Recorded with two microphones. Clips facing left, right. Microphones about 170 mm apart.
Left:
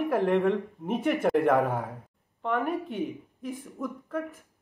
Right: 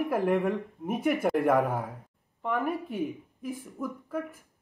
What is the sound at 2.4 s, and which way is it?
Speech, 5° right (ahead or behind).